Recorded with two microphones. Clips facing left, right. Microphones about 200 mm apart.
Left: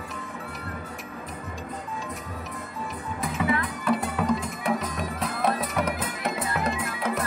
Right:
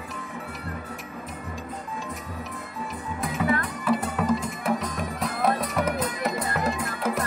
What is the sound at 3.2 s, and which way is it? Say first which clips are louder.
Music: right 1 dB; centre (ahead or behind).